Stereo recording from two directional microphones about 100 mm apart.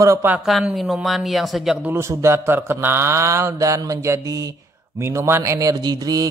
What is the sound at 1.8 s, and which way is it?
Speech, 25° right (ahead or behind).